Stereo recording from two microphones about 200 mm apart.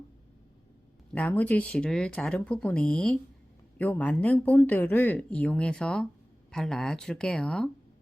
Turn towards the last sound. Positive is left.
turn(degrees=5)  # may be behind; listen again after turning